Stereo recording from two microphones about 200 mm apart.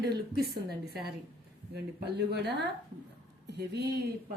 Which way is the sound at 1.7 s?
55° right (ahead or behind).